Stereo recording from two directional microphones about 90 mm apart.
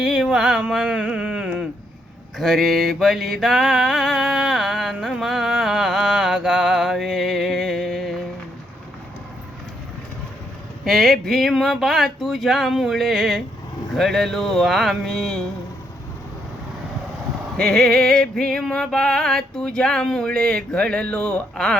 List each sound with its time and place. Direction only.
0.0 s a sound: 5° right (ahead or behind)
2.4 s mantra: centre (ahead or behind)
10.8 s speech: centre (ahead or behind)
17.6 s music: 5° left (ahead or behind)